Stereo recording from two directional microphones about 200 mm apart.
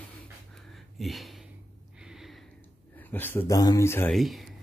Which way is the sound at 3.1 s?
10° left (ahead or behind).